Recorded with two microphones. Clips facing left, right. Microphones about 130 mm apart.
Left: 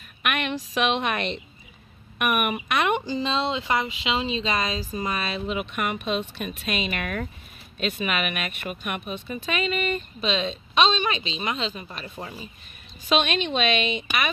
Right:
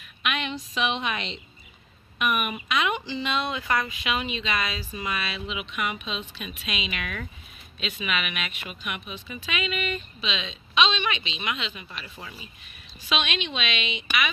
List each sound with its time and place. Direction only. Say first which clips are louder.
0.2 s a woman's voice: left 3 dB; 60° left (ahead or behind)
3.2 s speech: left 3 dB; 30° left (ahead or behind)